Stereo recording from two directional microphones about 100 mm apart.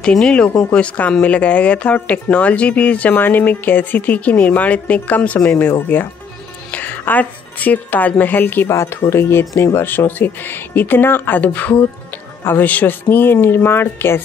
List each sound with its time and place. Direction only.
0.0 s speech: 10° left (ahead or behind)